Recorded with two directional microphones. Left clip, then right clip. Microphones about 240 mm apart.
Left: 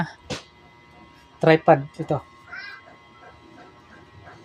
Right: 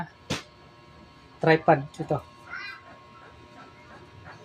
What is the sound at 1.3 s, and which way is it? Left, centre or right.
Speech, left.